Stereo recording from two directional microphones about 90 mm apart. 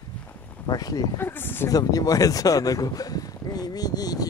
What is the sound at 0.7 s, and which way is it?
Speech, 45° left (ahead or behind).